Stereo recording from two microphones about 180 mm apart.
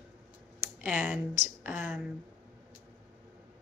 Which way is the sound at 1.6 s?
10° right (ahead or behind).